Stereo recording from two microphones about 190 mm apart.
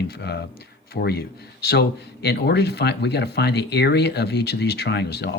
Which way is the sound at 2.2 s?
60° left (ahead or behind).